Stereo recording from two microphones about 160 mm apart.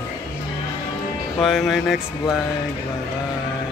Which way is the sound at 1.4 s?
Centre (ahead or behind).